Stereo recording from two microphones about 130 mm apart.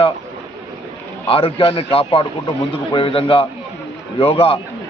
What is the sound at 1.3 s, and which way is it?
A man's voice, 45° left (ahead or behind).